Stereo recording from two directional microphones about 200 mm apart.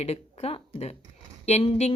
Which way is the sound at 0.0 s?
30° left (ahead or behind).